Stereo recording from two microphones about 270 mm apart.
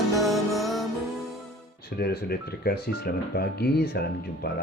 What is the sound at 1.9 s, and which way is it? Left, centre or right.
Speech, left.